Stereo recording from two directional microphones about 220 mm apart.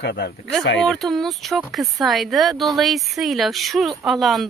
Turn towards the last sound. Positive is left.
turn(degrees=0)  # may be behind; listen again after turning